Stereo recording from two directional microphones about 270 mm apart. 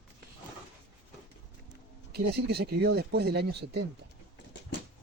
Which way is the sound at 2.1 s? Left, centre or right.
Right.